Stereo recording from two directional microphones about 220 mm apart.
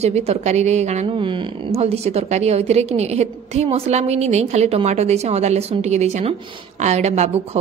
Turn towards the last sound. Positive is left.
turn(degrees=-30)  # may be behind; listen again after turning